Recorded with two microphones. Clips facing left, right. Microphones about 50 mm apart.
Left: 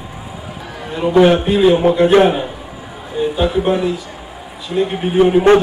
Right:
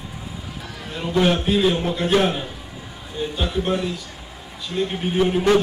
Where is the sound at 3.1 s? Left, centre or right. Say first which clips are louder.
Left 9 dB; centre.